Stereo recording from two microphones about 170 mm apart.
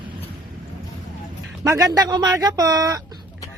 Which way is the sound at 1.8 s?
20° right (ahead or behind).